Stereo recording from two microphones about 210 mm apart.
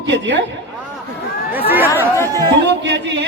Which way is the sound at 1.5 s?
10° right (ahead or behind).